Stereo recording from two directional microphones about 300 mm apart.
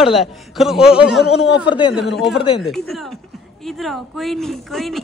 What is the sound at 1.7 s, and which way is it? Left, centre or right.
Speech, centre.